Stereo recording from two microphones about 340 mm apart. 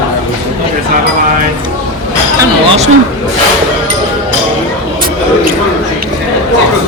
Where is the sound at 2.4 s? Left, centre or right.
Centre.